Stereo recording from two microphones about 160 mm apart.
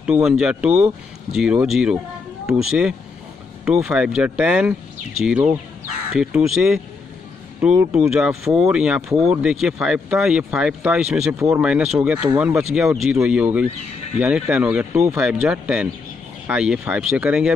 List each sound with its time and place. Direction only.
0.0 s speech: 5° right (ahead or behind)
11.3 s speech: 15° right (ahead or behind)
11.6 s speech: 5° right (ahead or behind)